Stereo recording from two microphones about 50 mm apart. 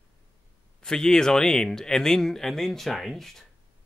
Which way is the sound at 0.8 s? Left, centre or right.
Centre.